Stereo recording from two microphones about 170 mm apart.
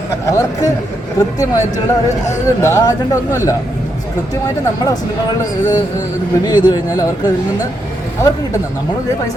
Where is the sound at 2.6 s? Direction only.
15° left (ahead or behind).